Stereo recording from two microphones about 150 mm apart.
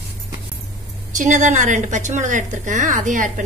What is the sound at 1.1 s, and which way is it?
A woman's voice, 55° right (ahead or behind).